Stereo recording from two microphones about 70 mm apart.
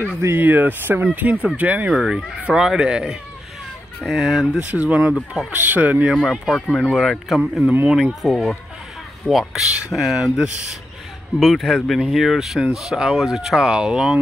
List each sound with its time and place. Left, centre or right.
0.4 s speech: right
1.9 s speech: centre
4.0 s speech: centre
4.6 s speech: right
5.1 s speech: centre
5.6 s speech: right
6.1 s speech: centre
7.6 s speech: right
8.1 s speech: centre